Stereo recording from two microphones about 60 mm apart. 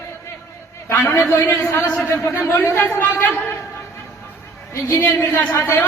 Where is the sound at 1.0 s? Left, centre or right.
Left.